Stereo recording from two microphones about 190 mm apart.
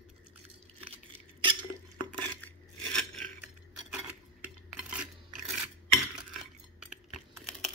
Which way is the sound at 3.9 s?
5° right (ahead or behind).